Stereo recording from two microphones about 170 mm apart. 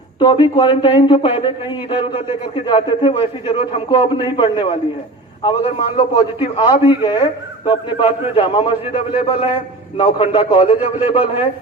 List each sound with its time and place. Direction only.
0.5 s a man's voice: 30° left (ahead or behind)